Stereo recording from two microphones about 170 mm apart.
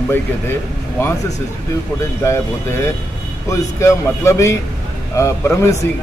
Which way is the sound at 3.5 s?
15° left (ahead or behind).